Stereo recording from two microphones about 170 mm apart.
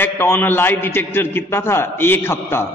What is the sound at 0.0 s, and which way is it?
A man's voice, 10° left (ahead or behind).